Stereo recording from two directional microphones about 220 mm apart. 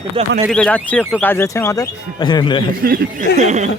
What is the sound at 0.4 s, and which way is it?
Speech, 5° left (ahead or behind).